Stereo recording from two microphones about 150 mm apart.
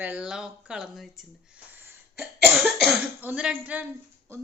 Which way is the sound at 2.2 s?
Centre (ahead or behind).